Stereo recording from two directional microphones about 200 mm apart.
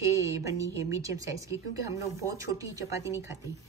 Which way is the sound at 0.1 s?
15° right (ahead or behind).